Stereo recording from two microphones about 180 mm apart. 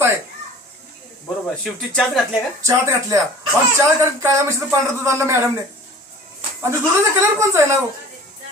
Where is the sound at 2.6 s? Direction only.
15° right (ahead or behind).